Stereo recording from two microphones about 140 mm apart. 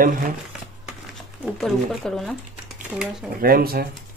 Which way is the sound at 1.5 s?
Centre (ahead or behind).